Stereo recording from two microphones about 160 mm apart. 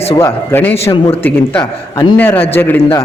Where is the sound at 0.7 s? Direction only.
40° left (ahead or behind).